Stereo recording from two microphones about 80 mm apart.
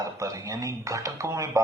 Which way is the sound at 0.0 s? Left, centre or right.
Right.